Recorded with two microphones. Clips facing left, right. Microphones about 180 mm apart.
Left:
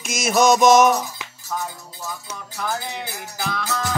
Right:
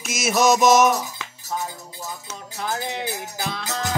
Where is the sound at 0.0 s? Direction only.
5° right (ahead or behind).